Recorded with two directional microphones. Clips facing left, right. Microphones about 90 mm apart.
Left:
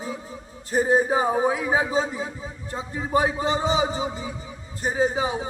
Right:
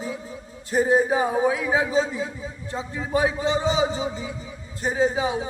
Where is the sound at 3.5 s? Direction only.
20° left (ahead or behind).